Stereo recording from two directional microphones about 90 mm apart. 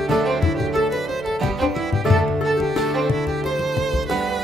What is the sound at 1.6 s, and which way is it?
Music, centre (ahead or behind).